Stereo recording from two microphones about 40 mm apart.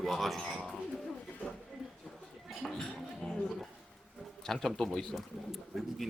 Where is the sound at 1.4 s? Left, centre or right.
Left.